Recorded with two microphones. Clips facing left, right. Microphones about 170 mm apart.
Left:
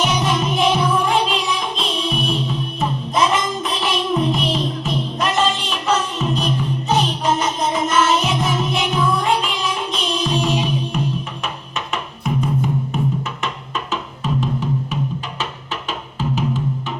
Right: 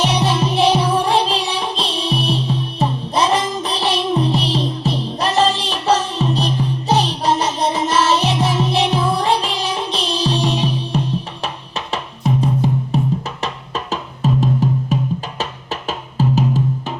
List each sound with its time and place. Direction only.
0.0 s music: 35° right (ahead or behind)